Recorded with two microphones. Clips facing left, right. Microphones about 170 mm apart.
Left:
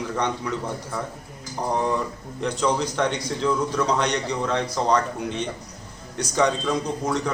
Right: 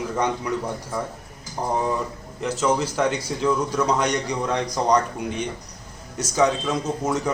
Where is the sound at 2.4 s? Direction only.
5° right (ahead or behind).